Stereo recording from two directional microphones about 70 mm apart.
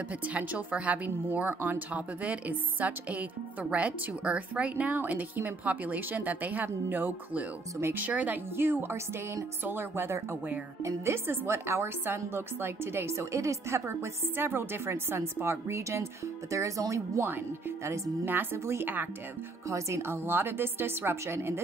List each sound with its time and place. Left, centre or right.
0.3 s speech: right
18.2 s speech: right